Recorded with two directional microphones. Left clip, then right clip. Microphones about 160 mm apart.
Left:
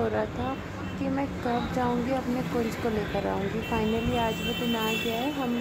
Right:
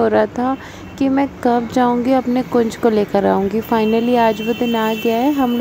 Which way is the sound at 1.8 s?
55° right (ahead or behind).